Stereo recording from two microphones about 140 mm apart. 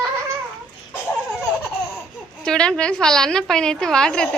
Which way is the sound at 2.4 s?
5° left (ahead or behind).